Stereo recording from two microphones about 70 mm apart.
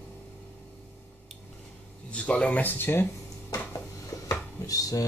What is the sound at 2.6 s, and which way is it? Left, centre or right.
Speech, left.